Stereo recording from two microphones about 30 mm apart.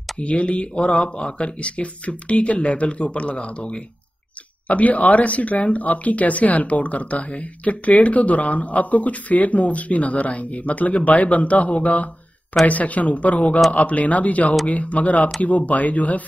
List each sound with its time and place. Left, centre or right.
0.2 s speech: left
4.6 s speech: left